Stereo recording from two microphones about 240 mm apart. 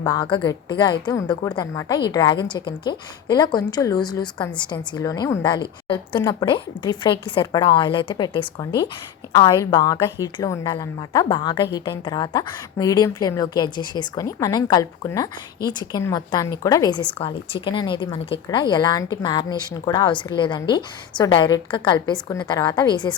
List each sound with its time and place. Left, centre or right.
0.0 s a woman's voice: centre
17.2 s speech: left